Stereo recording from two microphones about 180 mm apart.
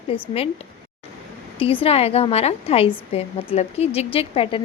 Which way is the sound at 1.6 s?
30° left (ahead or behind).